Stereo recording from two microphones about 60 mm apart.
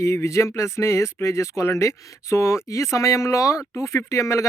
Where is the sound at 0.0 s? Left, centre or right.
Left.